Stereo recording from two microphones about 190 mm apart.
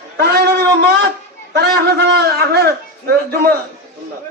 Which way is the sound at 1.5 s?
60° right (ahead or behind).